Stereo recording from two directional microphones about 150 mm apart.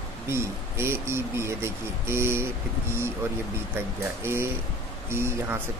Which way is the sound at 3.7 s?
15° right (ahead or behind).